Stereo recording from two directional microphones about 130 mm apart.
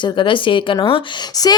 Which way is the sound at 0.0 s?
40° left (ahead or behind).